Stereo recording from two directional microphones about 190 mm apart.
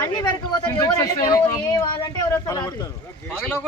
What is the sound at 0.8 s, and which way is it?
Speech, 20° left (ahead or behind).